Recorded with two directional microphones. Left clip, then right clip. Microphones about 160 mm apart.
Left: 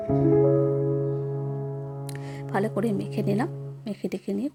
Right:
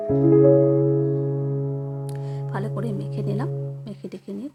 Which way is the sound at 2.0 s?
15° left (ahead or behind).